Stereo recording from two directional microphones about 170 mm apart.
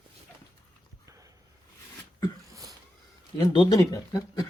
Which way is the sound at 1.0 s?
20° right (ahead or behind).